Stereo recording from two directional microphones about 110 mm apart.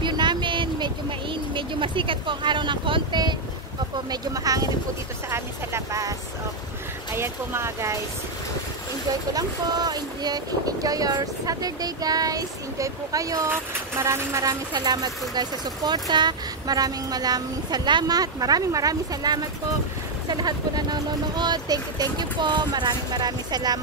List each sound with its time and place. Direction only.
0.0 s a sound: 45° right (ahead or behind)
4.1 s speech: 35° right (ahead or behind)
7.2 s speech: 25° right (ahead or behind)
9.3 s speech: 35° right (ahead or behind)
14.7 s speech: 40° right (ahead or behind)